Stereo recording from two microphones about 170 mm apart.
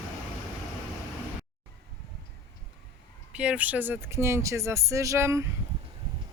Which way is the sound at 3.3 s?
5° right (ahead or behind).